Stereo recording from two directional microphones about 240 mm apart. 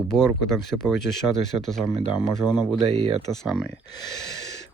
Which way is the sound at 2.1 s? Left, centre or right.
Centre.